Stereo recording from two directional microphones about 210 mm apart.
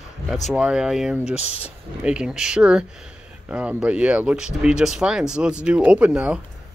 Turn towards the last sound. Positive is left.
turn(degrees=-5)  # may be behind; listen again after turning